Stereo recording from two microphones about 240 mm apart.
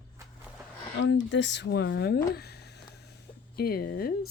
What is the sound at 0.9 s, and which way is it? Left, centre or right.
Speech, left.